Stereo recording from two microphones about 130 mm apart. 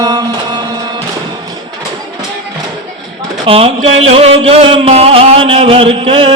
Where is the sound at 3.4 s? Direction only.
45° right (ahead or behind).